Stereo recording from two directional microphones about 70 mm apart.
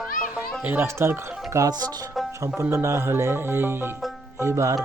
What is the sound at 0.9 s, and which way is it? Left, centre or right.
Speech, right.